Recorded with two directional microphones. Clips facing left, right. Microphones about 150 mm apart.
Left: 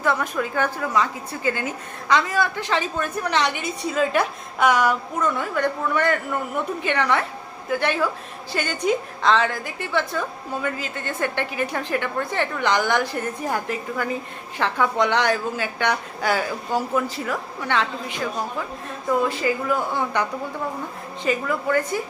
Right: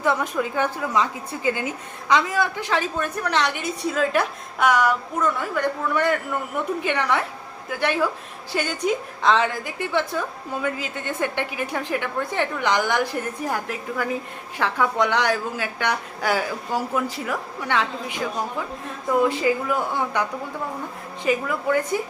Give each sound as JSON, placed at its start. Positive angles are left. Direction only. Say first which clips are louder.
{"t": 0.0, "sound": "a woman's voice", "louder": "right 1 dB", "side_deg": -15}
{"t": 19.3, "sound": "a woman's voice", "louder": "right 1 dB", "side_deg": -15}
{"t": 21.2, "sound": "a woman's voice", "louder": "right 1 dB", "side_deg": -10}